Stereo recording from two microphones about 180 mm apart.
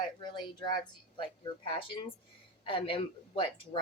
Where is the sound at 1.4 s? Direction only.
30° left (ahead or behind).